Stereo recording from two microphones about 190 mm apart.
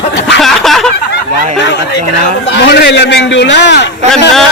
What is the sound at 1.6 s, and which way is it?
A man's voice, 65° left (ahead or behind).